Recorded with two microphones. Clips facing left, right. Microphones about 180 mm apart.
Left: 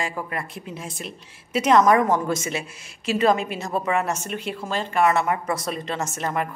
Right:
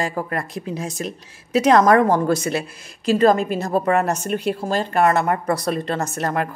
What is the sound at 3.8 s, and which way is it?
A woman's voice, 40° right (ahead or behind).